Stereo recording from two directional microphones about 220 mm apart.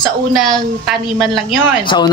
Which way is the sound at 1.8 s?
20° left (ahead or behind).